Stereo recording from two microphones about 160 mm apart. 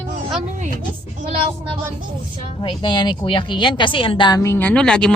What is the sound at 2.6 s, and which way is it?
Speech, 30° left (ahead or behind).